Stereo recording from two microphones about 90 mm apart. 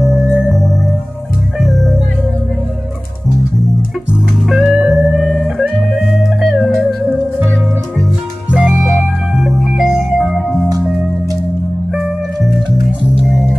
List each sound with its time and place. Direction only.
0.0 s music: centre (ahead or behind)
4.1 s music: centre (ahead or behind)
8.5 s music: 15° right (ahead or behind)
9.4 s organ: centre (ahead or behind)
13.2 s music: centre (ahead or behind)